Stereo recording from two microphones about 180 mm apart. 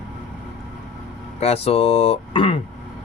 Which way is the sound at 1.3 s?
35° left (ahead or behind).